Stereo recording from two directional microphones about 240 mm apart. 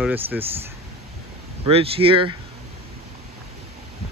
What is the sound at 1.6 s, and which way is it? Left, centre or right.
Speech, right.